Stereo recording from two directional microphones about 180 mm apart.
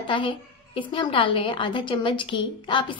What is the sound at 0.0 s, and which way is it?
A woman's voice, 30° left (ahead or behind).